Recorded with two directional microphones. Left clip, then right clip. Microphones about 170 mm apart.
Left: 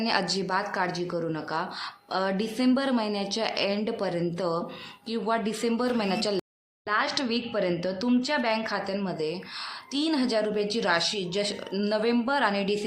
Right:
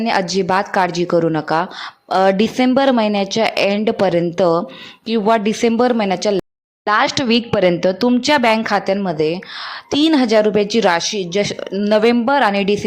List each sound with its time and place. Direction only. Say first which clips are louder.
0.0 s a woman's voice: right 10 dB; 45° right (ahead or behind)
6.8 s a woman's voice: right 12 dB; 55° right (ahead or behind)